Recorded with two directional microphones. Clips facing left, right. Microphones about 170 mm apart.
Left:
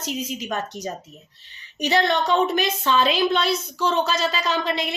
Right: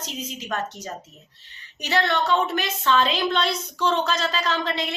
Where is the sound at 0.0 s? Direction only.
10° left (ahead or behind).